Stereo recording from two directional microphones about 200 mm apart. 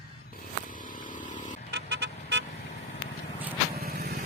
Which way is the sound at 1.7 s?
55° right (ahead or behind).